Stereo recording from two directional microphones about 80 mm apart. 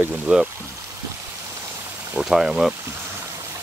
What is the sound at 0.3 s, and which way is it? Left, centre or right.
Speech, centre.